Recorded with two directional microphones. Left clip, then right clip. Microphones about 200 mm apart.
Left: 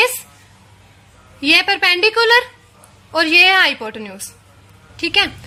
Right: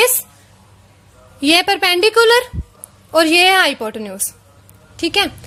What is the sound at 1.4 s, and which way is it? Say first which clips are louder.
A woman's voice: even; 45° right (ahead or behind).